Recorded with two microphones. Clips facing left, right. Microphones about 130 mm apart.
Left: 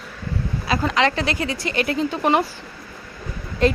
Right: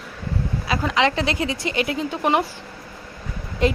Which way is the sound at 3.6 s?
15° right (ahead or behind).